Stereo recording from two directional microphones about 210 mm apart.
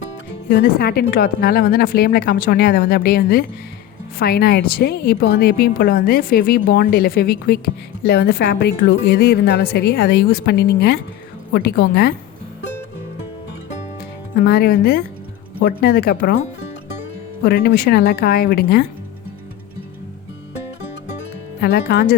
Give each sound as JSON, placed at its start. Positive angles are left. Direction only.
{"t": 0.4, "sound": "a woman's voice", "side_deg": 45}
{"t": 14.3, "sound": "a woman's voice", "side_deg": 50}
{"t": 17.4, "sound": "a woman's voice", "side_deg": 50}
{"t": 21.6, "sound": "a woman's voice", "side_deg": 50}